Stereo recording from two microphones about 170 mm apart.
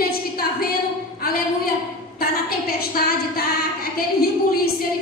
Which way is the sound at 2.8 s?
65° left (ahead or behind).